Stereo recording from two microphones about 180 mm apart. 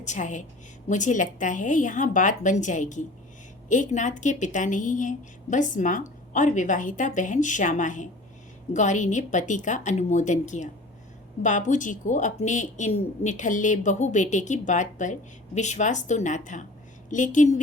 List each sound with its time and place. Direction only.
0.0 s speech: 40° left (ahead or behind)